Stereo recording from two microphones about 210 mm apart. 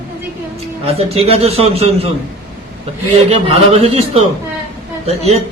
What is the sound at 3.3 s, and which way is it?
A man's voice, 30° right (ahead or behind).